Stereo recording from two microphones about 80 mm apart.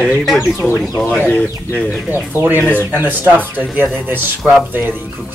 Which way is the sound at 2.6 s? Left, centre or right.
Left.